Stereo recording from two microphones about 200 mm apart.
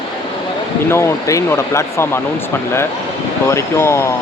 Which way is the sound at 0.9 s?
15° left (ahead or behind).